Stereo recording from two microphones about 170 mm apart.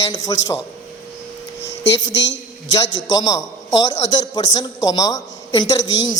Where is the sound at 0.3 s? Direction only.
25° left (ahead or behind).